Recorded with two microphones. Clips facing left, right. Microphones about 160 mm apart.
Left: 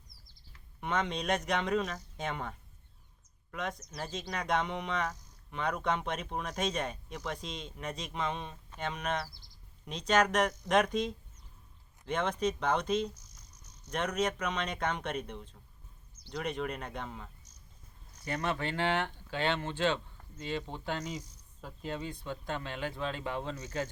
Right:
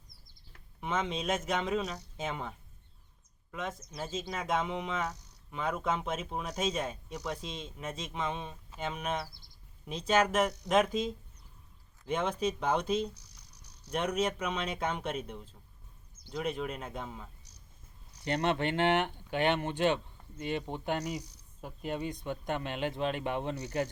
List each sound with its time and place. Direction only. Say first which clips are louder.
0.8 s speech: even; 5° right (ahead or behind)
13.1 s cricket: even; 70° right (ahead or behind)
13.9 s speech: right 1 dB; 10° right (ahead or behind)
18.4 s speech: right 4 dB; 20° right (ahead or behind)
21.0 s speech: right 3 dB; 70° right (ahead or behind)
21.6 s speech: right 3 dB; 15° right (ahead or behind)